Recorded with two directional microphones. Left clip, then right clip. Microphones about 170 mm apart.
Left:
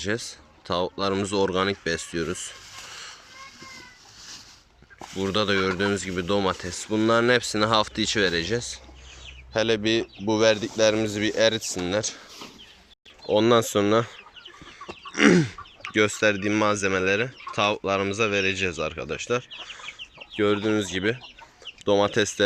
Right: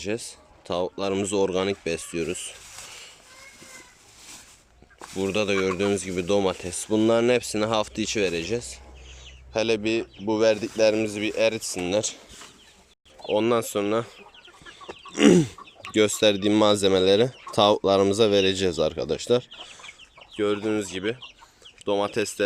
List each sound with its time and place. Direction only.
0.0 s speech: 10° right (ahead or behind)
5.1 s speech: 15° right (ahead or behind)
13.2 s speech: 5° right (ahead or behind)
14.8 s speech: 20° right (ahead or behind)
20.3 s speech: 5° right (ahead or behind)